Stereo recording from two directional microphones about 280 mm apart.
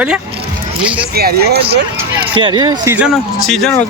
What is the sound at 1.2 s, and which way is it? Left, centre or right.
Speech, right.